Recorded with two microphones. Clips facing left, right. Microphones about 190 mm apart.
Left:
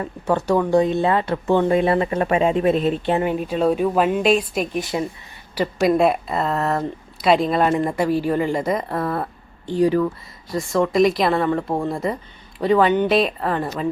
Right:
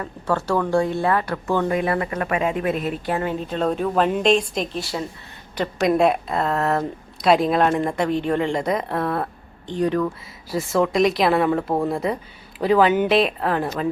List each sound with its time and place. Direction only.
0.0 s speech: 15° left (ahead or behind)
5.5 s speech: centre (ahead or behind)
10.5 s speech: centre (ahead or behind)